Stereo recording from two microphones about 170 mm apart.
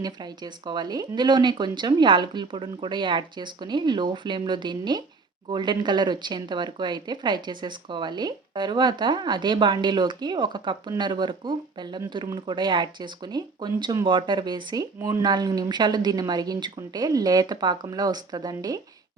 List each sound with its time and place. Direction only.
0.0 s speech: 25° right (ahead or behind)